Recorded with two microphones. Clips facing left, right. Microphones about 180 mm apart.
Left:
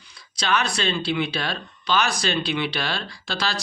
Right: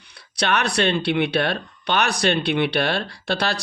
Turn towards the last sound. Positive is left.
turn(degrees=-60)  # may be behind; listen again after turning